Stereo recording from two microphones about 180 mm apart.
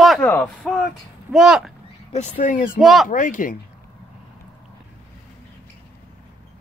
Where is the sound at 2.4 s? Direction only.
45° left (ahead or behind).